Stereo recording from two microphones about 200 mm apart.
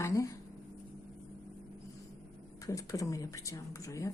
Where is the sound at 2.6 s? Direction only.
15° left (ahead or behind).